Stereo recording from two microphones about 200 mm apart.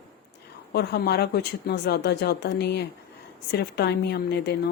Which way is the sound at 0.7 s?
55° left (ahead or behind).